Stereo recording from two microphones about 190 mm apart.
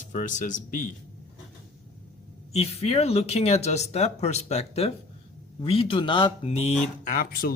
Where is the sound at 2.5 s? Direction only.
35° left (ahead or behind).